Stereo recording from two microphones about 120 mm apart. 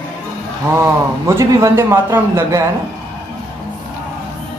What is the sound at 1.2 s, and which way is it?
A man's voice, 20° right (ahead or behind).